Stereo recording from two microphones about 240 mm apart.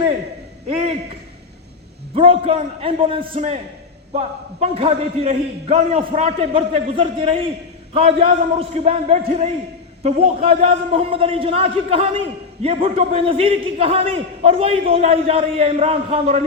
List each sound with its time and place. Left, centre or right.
2.1 s a man's voice: right